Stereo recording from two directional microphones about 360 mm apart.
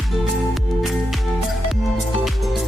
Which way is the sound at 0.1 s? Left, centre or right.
Centre.